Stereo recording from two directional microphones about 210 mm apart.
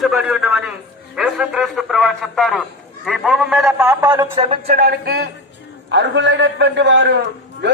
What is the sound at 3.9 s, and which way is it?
Speech, 15° right (ahead or behind).